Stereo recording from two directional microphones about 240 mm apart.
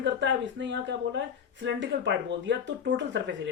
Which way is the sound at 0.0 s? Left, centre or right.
Right.